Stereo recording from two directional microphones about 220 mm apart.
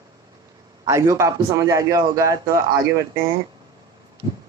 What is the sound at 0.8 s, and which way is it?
A man's voice, 15° right (ahead or behind).